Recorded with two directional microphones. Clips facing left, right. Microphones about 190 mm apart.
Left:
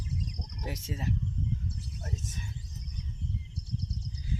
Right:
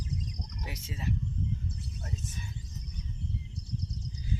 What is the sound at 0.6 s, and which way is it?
Speech, 45° left (ahead or behind).